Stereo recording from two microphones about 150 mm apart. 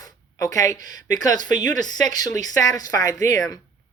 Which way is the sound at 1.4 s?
55° right (ahead or behind).